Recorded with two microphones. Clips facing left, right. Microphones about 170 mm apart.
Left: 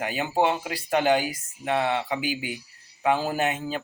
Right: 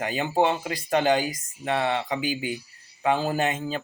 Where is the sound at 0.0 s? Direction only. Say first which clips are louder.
Right 1 dB; 10° left (ahead or behind).